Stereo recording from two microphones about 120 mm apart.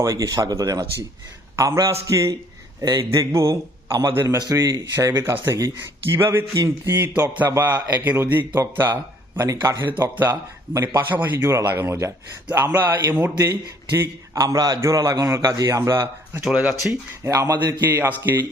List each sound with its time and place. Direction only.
0.0 s a man's voice: 30° right (ahead or behind)
4.4 s a man's voice: 30° right (ahead or behind)
16.4 s a man's voice: 5° right (ahead or behind)
17.2 s a man's voice: 25° right (ahead or behind)